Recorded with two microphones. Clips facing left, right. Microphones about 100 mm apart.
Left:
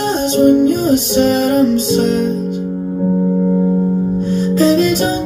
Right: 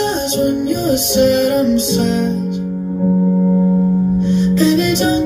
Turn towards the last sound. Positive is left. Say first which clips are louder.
# left 1 dB
turn(degrees=40)  # may be behind; listen again after turning